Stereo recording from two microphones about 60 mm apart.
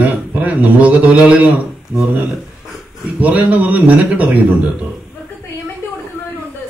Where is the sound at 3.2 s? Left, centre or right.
Right.